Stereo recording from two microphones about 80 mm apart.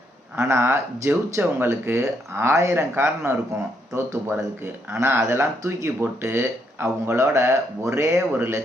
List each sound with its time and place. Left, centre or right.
0.3 s speech: right
4.4 s speech: right